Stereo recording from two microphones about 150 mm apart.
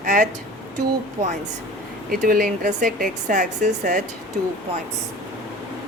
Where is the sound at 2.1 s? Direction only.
75° right (ahead or behind); by 3.9 s 55° right (ahead or behind).